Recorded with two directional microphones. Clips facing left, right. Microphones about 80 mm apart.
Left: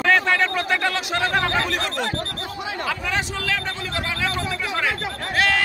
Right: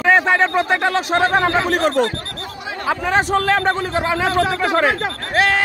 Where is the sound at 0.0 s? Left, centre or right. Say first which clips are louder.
Right 4 dB; right.